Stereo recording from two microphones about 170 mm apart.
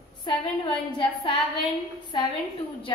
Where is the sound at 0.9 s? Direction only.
30° left (ahead or behind).